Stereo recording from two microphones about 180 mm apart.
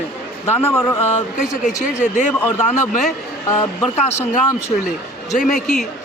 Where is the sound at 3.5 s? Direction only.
15° left (ahead or behind).